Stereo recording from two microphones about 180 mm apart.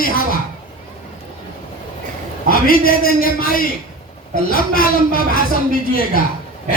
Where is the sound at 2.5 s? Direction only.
55° left (ahead or behind).